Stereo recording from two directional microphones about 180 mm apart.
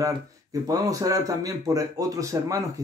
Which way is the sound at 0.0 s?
20° right (ahead or behind).